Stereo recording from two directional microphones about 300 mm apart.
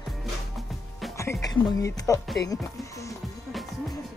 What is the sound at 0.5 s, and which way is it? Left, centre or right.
Music, centre.